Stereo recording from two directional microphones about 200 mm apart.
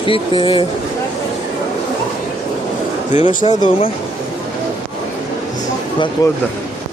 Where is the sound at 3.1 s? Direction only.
40° left (ahead or behind).